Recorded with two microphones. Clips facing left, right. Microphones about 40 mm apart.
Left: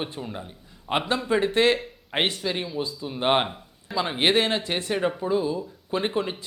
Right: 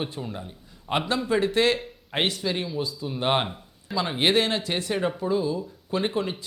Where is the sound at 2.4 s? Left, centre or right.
Centre.